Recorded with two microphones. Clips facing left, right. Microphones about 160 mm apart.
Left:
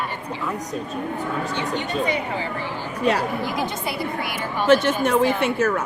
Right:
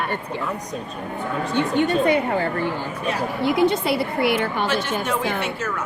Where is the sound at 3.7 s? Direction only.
65° right (ahead or behind).